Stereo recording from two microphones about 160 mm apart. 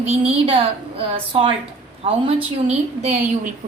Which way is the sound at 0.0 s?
40° right (ahead or behind).